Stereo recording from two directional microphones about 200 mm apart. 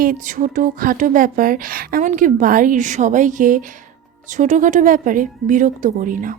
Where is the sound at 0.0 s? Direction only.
40° right (ahead or behind).